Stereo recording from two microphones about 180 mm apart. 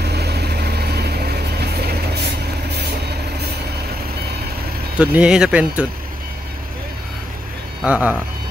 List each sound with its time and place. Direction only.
0.0 s vehicle: 65° right (ahead or behind)
4.9 s speech: 10° right (ahead or behind)
7.8 s speech: 5° right (ahead or behind)